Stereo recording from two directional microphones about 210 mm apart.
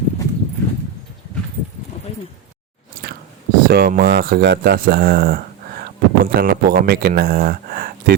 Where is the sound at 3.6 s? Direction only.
45° right (ahead or behind).